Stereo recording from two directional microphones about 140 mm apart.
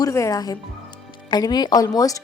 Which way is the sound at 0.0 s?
25° left (ahead or behind).